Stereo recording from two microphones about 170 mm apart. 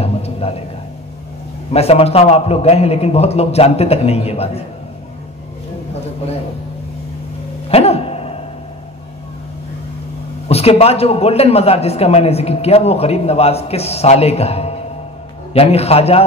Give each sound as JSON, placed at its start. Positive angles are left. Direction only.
{"t": 0.0, "sound": "a man's voice", "side_deg": 35}
{"t": 1.7, "sound": "a man's voice", "side_deg": 35}
{"t": 7.7, "sound": "a sound", "side_deg": 35}
{"t": 10.5, "sound": "a man's voice", "side_deg": 35}